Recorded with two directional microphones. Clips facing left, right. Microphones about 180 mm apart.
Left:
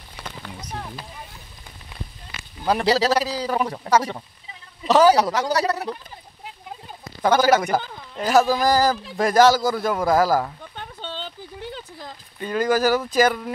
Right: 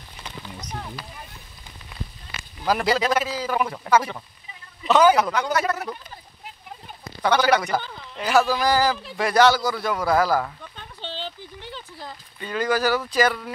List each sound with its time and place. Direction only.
2.6 s a man's voice: 30° left (ahead or behind)
7.2 s speech: 45° left (ahead or behind)
10.8 s a sound: 45° left (ahead or behind)